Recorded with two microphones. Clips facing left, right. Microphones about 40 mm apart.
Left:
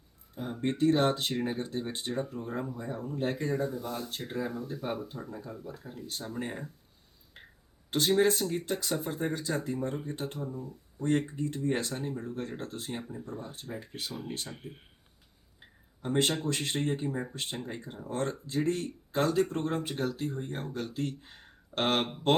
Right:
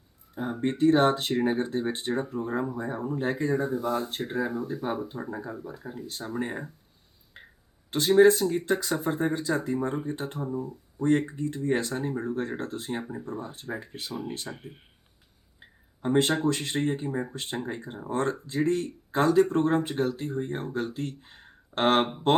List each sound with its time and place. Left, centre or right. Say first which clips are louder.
0.6 s speech: right 4 dB; centre
2.6 s speech: right 6 dB; centre
3.7 s speech: right 8 dB; right
4.3 s speech: right 3 dB; centre
16.0 s speech: right 5 dB; centre
17.9 s speech: right 5 dB; right
18.4 s speech: right 4 dB; centre
19.1 s speech: right 6 dB; centre
21.0 s speech: even; centre
21.8 s speech: right 6 dB; centre
22.1 s speech: right 3 dB; centre